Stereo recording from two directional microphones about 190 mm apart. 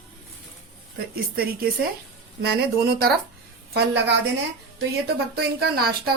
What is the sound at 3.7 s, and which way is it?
A woman's voice, 65° right (ahead or behind).